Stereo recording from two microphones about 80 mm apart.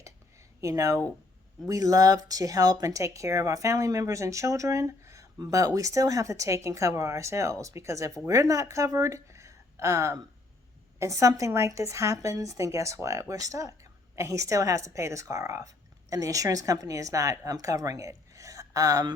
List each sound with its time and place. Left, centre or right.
0.6 s a woman's voice: right